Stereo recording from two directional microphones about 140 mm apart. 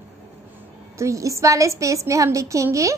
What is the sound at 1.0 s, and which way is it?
A woman's voice, 20° right (ahead or behind).